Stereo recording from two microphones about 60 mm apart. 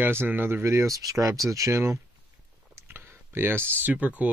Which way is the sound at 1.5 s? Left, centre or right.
Right.